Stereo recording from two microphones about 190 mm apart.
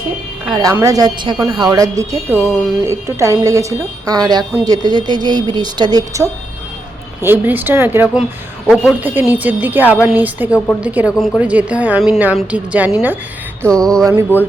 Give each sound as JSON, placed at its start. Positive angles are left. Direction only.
{"t": 0.5, "sound": "a woman's voice", "side_deg": -15}
{"t": 9.0, "sound": "a woman's voice", "side_deg": -10}
{"t": 13.7, "sound": "mantra", "side_deg": 5}